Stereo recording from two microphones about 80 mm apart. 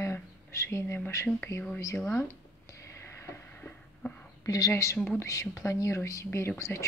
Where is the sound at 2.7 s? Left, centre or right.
Left.